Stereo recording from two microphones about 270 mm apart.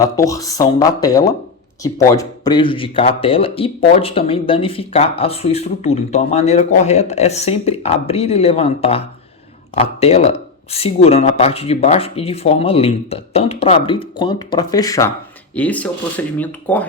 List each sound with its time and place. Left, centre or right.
0.0 s speech: centre